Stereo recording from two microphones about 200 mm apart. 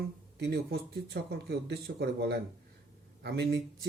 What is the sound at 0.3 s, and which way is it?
Speech, 55° right (ahead or behind).